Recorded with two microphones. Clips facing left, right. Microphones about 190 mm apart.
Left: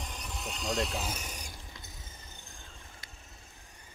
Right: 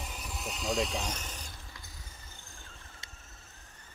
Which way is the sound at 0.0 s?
5° right (ahead or behind).